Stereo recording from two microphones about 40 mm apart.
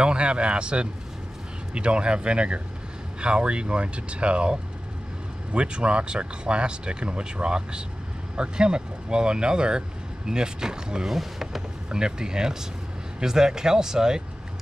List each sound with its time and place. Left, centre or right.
0.0 s speech: right
11.1 s speech: centre
11.9 s speech: centre